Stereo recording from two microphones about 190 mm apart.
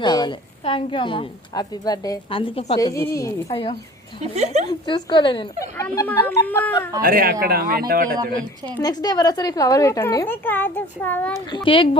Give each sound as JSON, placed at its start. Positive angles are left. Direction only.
{"t": 0.0, "sound": "a woman's voice", "side_deg": 25}
{"t": 2.7, "sound": "speech", "side_deg": 15}
{"t": 3.5, "sound": "a woman's voice", "side_deg": 30}
{"t": 4.2, "sound": "speech", "side_deg": -35}
{"t": 4.9, "sound": "a woman's voice", "side_deg": 25}
{"t": 5.7, "sound": "speech", "side_deg": 10}
{"t": 7.0, "sound": "speech", "side_deg": -50}
{"t": 8.8, "sound": "speech", "side_deg": 20}
{"t": 11.5, "sound": "a woman's voice", "side_deg": 25}